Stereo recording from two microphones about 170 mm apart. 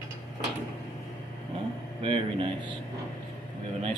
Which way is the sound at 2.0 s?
30° right (ahead or behind).